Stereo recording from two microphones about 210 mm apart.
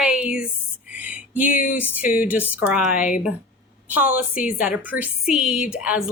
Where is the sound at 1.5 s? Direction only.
40° left (ahead or behind).